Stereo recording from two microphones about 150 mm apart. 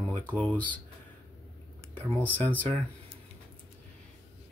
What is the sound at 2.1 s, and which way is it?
Speech, 10° left (ahead or behind).